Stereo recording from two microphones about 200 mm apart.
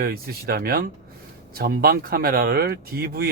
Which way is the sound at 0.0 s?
50° right (ahead or behind).